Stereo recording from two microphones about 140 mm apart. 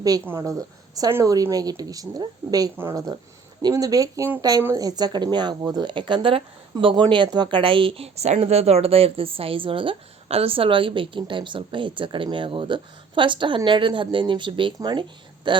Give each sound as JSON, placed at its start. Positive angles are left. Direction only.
{"t": 0.3, "sound": "a woman's voice", "side_deg": -25}